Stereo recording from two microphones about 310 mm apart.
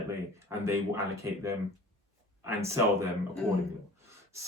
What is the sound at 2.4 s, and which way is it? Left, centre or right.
Speech, centre.